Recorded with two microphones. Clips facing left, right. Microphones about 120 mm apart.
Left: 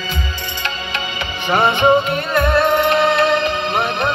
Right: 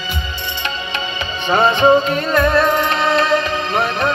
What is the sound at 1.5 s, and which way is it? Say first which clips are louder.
Music: right 1 dB; 30° right (ahead or behind).